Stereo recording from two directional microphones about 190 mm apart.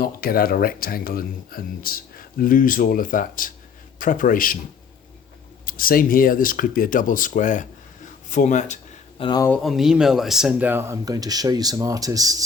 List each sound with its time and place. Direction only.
0.0 s speech: 50° left (ahead or behind)
5.6 s speech: 50° left (ahead or behind)
8.3 s a sound: 40° left (ahead or behind)
9.2 s speech: 20° left (ahead or behind)
9.5 s speech: centre (ahead or behind); by 12.5 s 20° right (ahead or behind)